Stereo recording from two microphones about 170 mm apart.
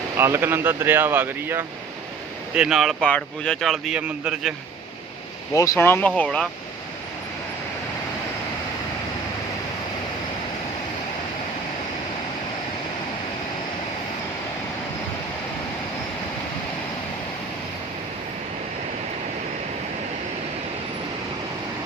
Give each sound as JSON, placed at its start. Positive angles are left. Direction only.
{"t": 0.2, "sound": "speech", "side_deg": -15}
{"t": 2.6, "sound": "speech", "side_deg": 0}
{"t": 5.5, "sound": "speech", "side_deg": 15}